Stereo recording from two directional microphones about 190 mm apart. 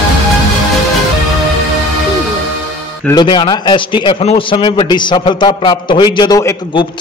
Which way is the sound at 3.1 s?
25° left (ahead or behind).